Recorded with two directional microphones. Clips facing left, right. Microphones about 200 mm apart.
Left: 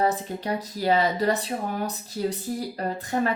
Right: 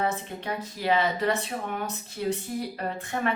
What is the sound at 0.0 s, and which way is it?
A woman's voice, 35° left (ahead or behind).